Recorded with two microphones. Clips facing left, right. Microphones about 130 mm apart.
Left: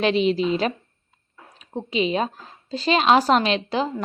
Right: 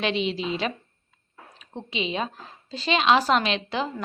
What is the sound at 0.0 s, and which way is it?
A woman's voice, 40° left (ahead or behind).